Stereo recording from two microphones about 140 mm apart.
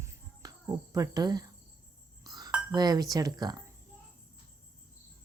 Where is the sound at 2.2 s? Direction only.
30° right (ahead or behind).